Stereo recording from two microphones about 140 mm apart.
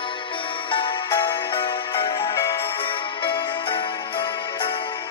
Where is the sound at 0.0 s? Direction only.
35° left (ahead or behind).